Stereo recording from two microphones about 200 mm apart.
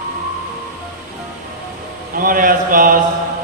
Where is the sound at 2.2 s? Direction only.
45° right (ahead or behind).